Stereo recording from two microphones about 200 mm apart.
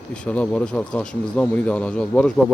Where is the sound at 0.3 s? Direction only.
5° left (ahead or behind).